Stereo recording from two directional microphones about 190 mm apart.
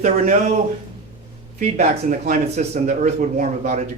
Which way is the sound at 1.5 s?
40° right (ahead or behind).